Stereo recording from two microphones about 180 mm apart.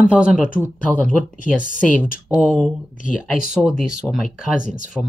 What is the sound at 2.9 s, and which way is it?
Speech, 45° left (ahead or behind).